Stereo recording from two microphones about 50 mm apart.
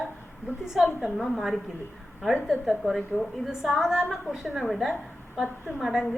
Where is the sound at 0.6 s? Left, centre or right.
Centre.